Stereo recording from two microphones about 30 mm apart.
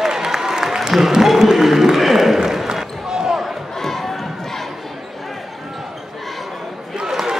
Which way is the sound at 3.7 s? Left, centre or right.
Centre.